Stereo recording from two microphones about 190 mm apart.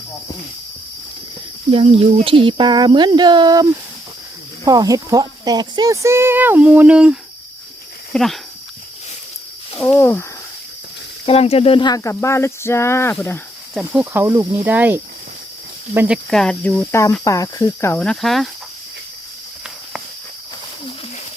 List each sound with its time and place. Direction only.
1.7 s speech: 30° right (ahead or behind); by 8.4 s centre (ahead or behind)
9.8 s speech: 10° left (ahead or behind)
11.3 s speech: 30° left (ahead or behind); by 13.4 s 10° left (ahead or behind)
13.9 s speech: 10° right (ahead or behind)